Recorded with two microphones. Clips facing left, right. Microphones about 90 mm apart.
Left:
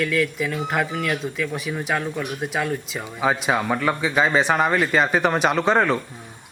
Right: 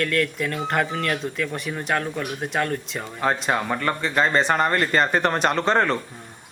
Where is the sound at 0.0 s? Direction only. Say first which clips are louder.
Left 1 dB; centre (ahead or behind).